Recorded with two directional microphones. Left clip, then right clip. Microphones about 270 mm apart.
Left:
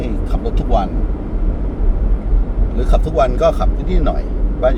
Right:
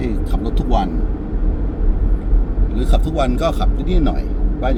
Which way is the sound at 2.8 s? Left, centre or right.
Centre.